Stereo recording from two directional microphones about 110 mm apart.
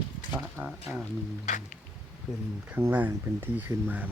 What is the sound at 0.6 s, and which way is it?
Speech, 15° right (ahead or behind).